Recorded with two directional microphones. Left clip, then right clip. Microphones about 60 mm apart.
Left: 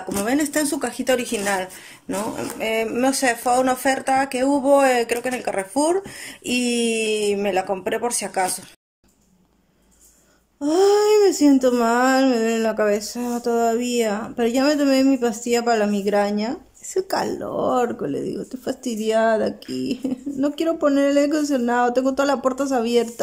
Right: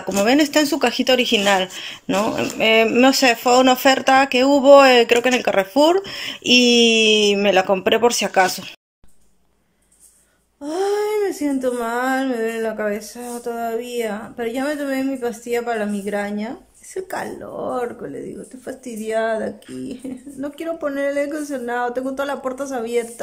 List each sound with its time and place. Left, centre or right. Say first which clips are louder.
0.3 s speech: right 5 dB; centre
1.3 s speech: right 7 dB; centre
3.4 s speech: right 5 dB; centre
7.7 s speech: right 7 dB; centre
10.6 s speech: left 4 dB; centre